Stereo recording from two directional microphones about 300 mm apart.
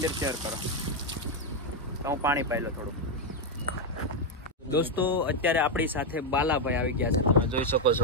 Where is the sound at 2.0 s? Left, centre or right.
Centre.